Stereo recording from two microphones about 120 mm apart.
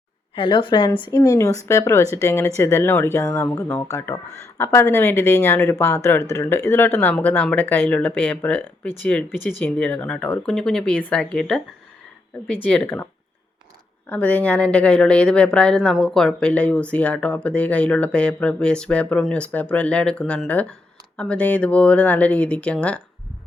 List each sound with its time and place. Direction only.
0.3 s a woman's voice: 45° left (ahead or behind)
1.1 s speech: 25° left (ahead or behind); by 11.6 s 5° left (ahead or behind)
12.6 s speech: 10° left (ahead or behind)
14.1 s speech: 15° left (ahead or behind)